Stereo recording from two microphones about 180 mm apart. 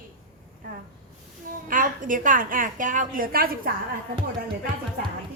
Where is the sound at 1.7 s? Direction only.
50° right (ahead or behind).